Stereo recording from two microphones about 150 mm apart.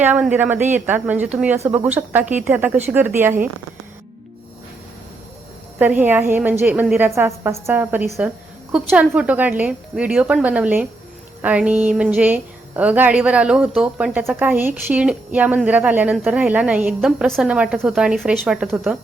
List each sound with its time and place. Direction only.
0.0 s a woman's voice: 10° right (ahead or behind)
5.8 s a woman's voice: 10° right (ahead or behind)